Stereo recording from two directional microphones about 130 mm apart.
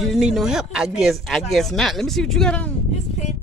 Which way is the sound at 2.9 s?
65° left (ahead or behind).